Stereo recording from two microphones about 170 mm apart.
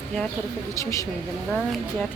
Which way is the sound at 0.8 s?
20° left (ahead or behind).